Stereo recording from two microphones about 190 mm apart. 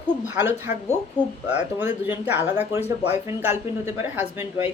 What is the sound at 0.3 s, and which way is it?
Speech, 10° right (ahead or behind).